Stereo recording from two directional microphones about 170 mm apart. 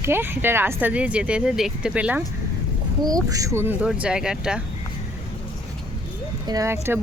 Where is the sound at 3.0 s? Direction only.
20° right (ahead or behind); by 4.6 s 5° right (ahead or behind).